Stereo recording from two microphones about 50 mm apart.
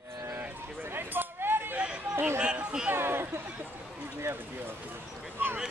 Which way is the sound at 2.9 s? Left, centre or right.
Right.